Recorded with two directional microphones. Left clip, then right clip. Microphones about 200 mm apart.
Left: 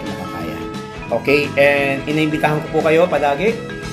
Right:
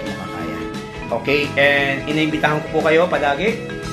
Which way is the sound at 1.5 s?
10° left (ahead or behind).